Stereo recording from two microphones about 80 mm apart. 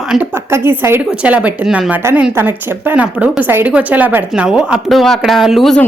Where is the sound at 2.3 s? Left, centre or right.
Right.